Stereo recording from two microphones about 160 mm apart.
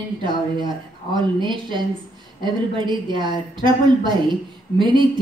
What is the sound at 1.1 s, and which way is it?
A woman's voice, 30° right (ahead or behind).